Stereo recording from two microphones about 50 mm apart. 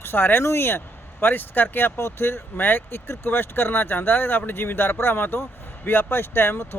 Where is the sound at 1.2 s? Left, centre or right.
Left.